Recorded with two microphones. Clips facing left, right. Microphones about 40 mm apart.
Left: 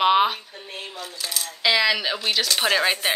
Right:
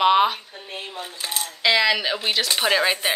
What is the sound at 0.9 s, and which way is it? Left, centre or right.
Coin, right.